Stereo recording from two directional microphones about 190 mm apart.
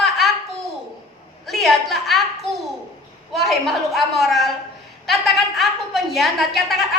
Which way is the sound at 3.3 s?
Centre (ahead or behind).